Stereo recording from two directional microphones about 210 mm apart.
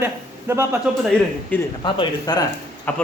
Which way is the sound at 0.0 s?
10° right (ahead or behind).